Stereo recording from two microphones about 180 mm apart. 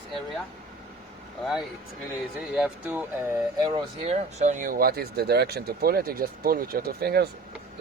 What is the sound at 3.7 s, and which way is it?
Speech, 35° right (ahead or behind).